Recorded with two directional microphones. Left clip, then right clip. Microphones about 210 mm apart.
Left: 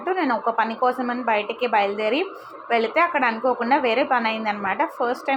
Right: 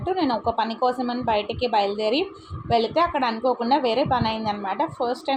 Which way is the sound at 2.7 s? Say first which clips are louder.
Left 1 dB; 5° left (ahead or behind).